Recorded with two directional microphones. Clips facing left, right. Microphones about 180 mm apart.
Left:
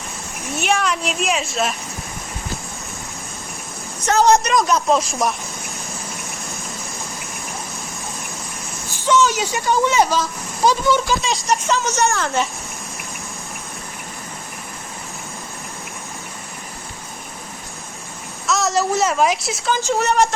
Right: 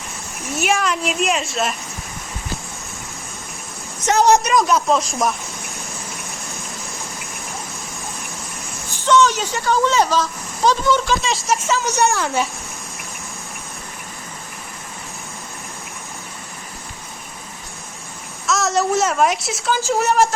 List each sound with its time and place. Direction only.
0.6 s speech: centre (ahead or behind)
4.0 s a woman's voice: 15° right (ahead or behind)
4.5 s speech: centre (ahead or behind)
9.0 s speech: 10° left (ahead or behind)
11.9 s a woman's voice: 15° right (ahead or behind)
18.4 s a woman's voice: centre (ahead or behind)